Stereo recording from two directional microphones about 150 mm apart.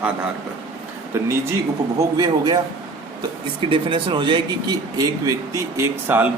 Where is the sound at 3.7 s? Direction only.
35° right (ahead or behind).